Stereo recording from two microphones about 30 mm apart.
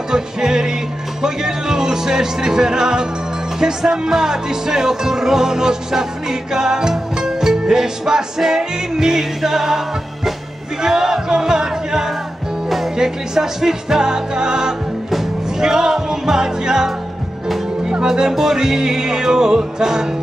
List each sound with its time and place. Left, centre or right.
0.1 s music: right
3.5 s speech: right
8.4 s music: centre
12.6 s music: centre
12.9 s music: right
18.0 s music: right